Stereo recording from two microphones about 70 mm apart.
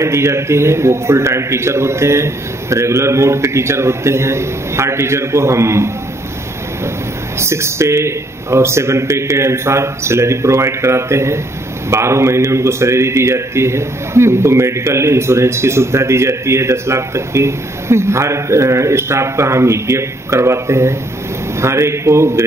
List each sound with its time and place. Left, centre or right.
0.0 s a man's voice: right
7.3 s a man's voice: right